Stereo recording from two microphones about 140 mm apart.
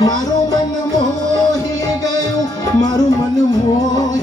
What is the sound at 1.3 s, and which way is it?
Music, 25° left (ahead or behind).